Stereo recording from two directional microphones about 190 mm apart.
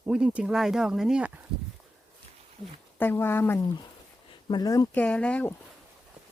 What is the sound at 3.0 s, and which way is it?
Speech, 10° left (ahead or behind).